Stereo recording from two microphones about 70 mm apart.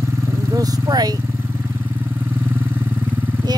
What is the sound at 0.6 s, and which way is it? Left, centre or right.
Speech, right.